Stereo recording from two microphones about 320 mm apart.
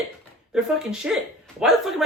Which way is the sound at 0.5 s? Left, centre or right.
Centre.